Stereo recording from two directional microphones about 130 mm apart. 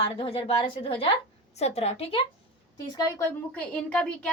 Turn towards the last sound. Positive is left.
turn(degrees=5)  # may be behind; listen again after turning